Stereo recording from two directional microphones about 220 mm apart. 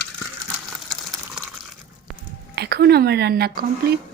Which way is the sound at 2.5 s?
50° right (ahead or behind).